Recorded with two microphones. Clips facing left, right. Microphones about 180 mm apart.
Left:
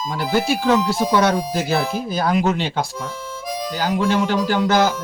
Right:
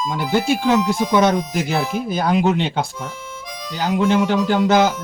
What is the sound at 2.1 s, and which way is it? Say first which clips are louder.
Speech: right 2 dB; 15° right (ahead or behind).